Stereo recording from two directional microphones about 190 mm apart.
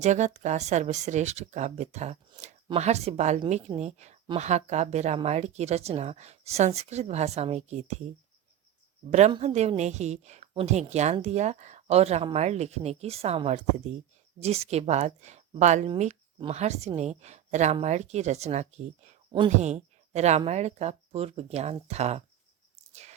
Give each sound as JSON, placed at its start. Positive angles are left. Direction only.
{"t": 0.0, "sound": "a woman's voice", "side_deg": -40}
{"t": 9.0, "sound": "a woman's voice", "side_deg": -35}
{"t": 19.3, "sound": "speech", "side_deg": -25}
{"t": 19.7, "sound": "a woman's voice", "side_deg": -35}
{"t": 22.9, "sound": "a sound", "side_deg": -35}